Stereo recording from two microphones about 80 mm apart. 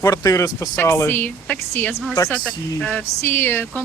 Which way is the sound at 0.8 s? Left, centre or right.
Left.